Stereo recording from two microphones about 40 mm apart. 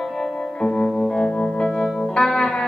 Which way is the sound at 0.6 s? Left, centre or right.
Centre.